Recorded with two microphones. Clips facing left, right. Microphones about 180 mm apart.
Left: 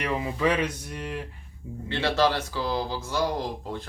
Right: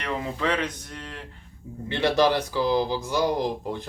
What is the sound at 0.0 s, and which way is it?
Speech, 5° left (ahead or behind).